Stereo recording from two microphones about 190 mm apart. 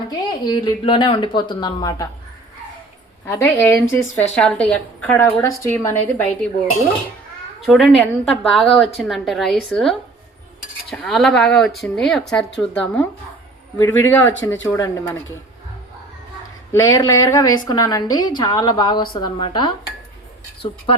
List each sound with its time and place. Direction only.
0.1 s a woman's voice: 20° left (ahead or behind)
3.2 s a woman's voice: 15° left (ahead or behind)
7.6 s a woman's voice: centre (ahead or behind); by 15.1 s 15° left (ahead or behind)
16.7 s a woman's voice: 15° left (ahead or behind)